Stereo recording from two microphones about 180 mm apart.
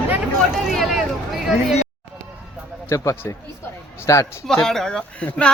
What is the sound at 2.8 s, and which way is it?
A man's voice, 15° left (ahead or behind).